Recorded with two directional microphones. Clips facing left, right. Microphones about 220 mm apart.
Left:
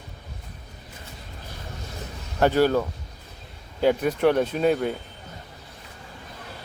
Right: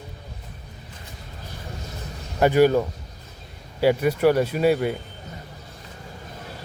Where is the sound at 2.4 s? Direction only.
15° right (ahead or behind).